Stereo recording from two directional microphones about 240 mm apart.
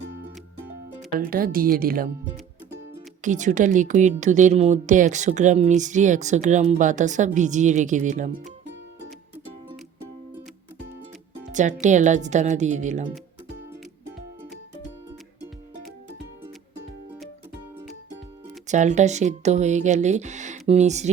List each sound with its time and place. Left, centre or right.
1.3 s a woman's voice: right
3.2 s a woman's voice: right
11.5 s speech: right
18.7 s speech: right